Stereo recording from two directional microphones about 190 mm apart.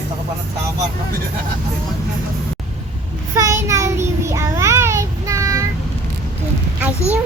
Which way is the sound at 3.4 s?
15° right (ahead or behind).